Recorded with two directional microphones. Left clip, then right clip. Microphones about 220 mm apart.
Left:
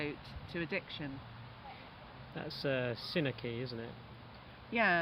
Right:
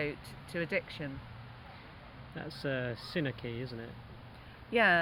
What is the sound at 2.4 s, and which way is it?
Speech, 10° left (ahead or behind).